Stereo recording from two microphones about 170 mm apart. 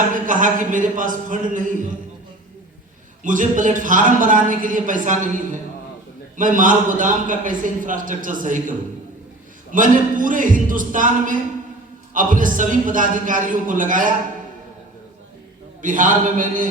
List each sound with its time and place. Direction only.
0.1 s a man's voice: 50° right (ahead or behind)
3.2 s a man's voice: 50° right (ahead or behind)
9.7 s a man's voice: 50° right (ahead or behind)
15.8 s a man's voice: 50° right (ahead or behind)